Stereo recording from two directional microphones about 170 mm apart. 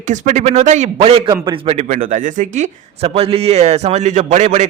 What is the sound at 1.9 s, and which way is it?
A man's voice, 50° right (ahead or behind).